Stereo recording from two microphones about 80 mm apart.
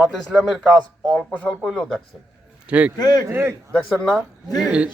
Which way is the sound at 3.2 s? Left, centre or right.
Right.